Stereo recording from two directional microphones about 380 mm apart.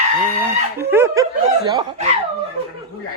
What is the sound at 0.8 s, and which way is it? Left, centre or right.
Speech, centre.